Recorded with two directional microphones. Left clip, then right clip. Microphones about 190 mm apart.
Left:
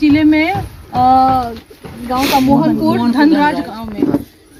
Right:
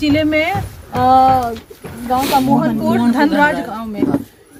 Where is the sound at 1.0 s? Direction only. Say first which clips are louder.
Even; 40° right (ahead or behind).